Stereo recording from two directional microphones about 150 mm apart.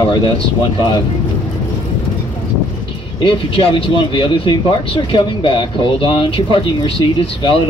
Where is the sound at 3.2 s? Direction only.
35° left (ahead or behind).